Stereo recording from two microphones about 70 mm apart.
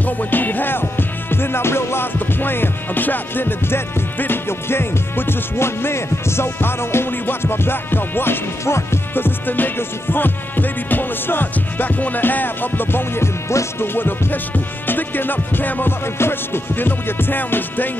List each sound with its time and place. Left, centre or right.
0.0 s music: left
13.9 s music: left